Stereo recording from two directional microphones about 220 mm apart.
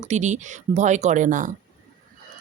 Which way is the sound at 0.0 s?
30° right (ahead or behind).